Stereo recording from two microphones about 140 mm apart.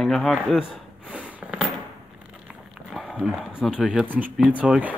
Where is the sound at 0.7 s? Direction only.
10° right (ahead or behind).